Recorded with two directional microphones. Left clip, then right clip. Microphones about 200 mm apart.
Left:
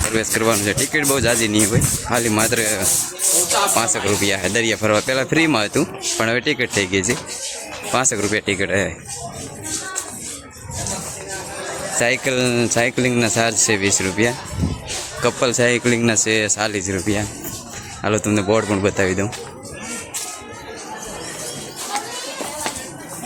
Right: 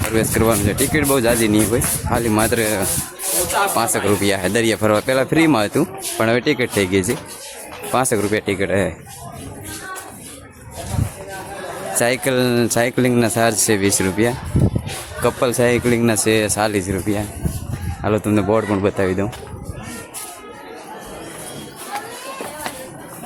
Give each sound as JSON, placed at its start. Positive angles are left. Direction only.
{"t": 0.1, "sound": "speech", "side_deg": -10}
{"t": 11.9, "sound": "speech", "side_deg": -25}
{"t": 13.0, "sound": "speech", "side_deg": -15}
{"t": 15.2, "sound": "speech", "side_deg": -5}